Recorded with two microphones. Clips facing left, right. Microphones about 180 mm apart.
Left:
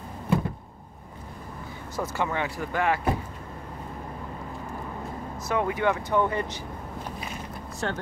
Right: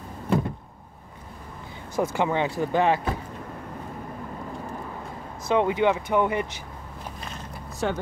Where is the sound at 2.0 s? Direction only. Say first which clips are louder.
Right 5 dB; 20° right (ahead or behind).